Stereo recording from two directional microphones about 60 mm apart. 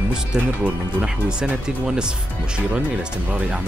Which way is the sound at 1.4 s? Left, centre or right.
Centre.